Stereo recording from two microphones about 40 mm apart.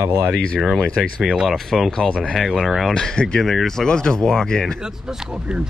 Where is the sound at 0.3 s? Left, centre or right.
Left.